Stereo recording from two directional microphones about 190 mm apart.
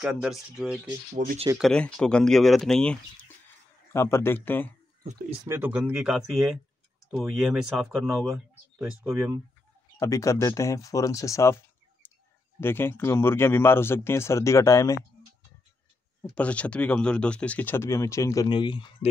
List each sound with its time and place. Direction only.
0.0 s speech: 5° right (ahead or behind)
1.1 s speech: 45° right (ahead or behind)
1.6 s speech: 5° left (ahead or behind)
5.4 s speech: 10° right (ahead or behind)
8.7 s speech: 10° right (ahead or behind)
9.9 s speech: 15° left (ahead or behind)
16.2 s speech: 5° left (ahead or behind); by 18.9 s 25° left (ahead or behind)